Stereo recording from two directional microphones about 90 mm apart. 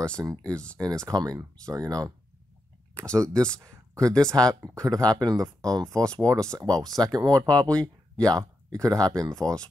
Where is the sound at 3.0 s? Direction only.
15° left (ahead or behind).